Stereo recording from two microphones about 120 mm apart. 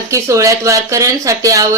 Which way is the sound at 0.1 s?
25° right (ahead or behind).